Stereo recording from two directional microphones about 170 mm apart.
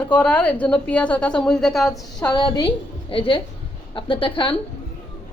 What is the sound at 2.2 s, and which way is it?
A woman's voice, 25° left (ahead or behind).